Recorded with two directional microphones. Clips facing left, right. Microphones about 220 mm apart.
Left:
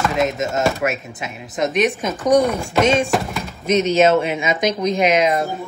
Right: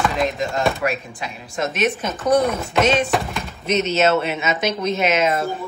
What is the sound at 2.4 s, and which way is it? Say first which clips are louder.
Speech: left 1 dB; centre (ahead or behind).